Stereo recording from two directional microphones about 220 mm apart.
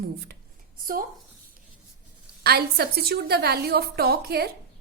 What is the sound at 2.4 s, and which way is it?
A woman's voice, 45° right (ahead or behind).